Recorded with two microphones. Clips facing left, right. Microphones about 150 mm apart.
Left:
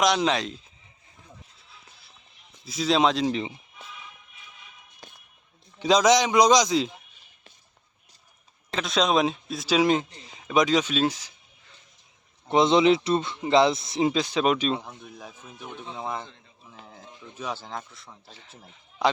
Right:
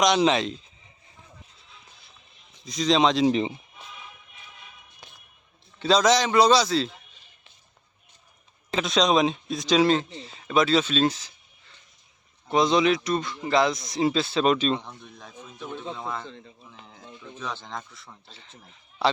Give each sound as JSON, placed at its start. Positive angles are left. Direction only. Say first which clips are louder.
{"t": 0.3, "sound": "speech", "louder": "right 3 dB", "side_deg": 0}
{"t": 2.6, "sound": "speech", "louder": "right 1 dB", "side_deg": 5}
{"t": 3.2, "sound": "speech", "louder": "right 5 dB", "side_deg": -20}
{"t": 5.8, "sound": "a man's voice", "louder": "left 1 dB", "side_deg": 10}
{"t": 8.7, "sound": "speech", "louder": "right 1 dB", "side_deg": 0}
{"t": 12.5, "sound": "speech", "louder": "left 2 dB", "side_deg": 25}
{"t": 14.1, "sound": "speech", "louder": "right 3 dB", "side_deg": 15}
{"t": 17.3, "sound": "speech", "louder": "left 2 dB", "side_deg": 10}